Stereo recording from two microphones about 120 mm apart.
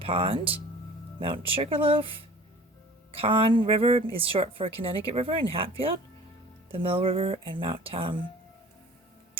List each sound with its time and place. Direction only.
0.0 s a woman's voice: 50° right (ahead or behind)
3.2 s a woman's voice: 50° right (ahead or behind)